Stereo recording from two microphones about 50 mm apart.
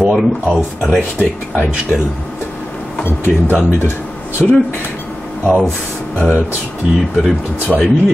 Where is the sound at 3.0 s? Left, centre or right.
Left.